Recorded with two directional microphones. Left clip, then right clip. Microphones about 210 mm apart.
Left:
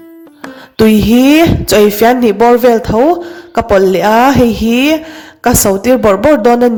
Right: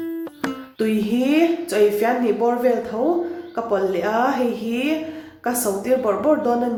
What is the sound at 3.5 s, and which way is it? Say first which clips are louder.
Speech: left 13 dB; 50° left (ahead or behind).